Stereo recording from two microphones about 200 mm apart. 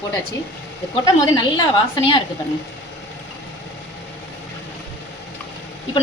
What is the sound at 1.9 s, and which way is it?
Speech, 25° left (ahead or behind).